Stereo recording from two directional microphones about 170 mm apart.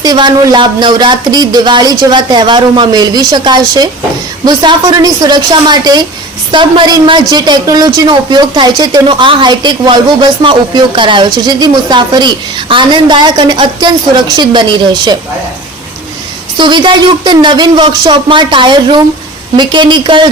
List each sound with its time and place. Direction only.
0.0 s a woman's voice: 25° right (ahead or behind)
16.6 s a woman's voice: 25° right (ahead or behind)